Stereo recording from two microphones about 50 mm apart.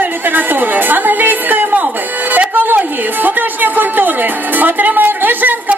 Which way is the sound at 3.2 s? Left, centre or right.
Right.